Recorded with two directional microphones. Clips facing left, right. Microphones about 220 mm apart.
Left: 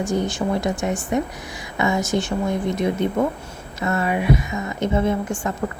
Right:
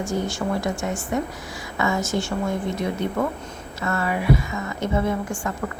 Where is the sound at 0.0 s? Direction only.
15° left (ahead or behind).